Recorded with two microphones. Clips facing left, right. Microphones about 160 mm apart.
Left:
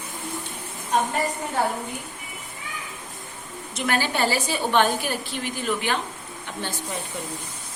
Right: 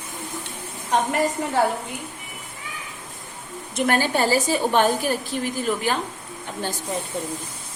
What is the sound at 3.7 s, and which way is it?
A woman's voice, 45° right (ahead or behind).